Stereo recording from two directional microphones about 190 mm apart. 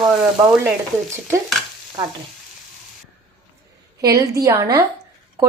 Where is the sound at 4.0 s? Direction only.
15° right (ahead or behind).